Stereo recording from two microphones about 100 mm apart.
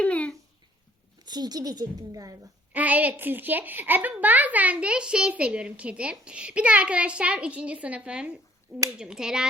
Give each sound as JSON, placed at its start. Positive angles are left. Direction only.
{"t": 0.0, "sound": "a sound", "side_deg": 10}
{"t": 1.2, "sound": "a woman's voice", "side_deg": -45}
{"t": 2.7, "sound": "a woman's voice", "side_deg": -15}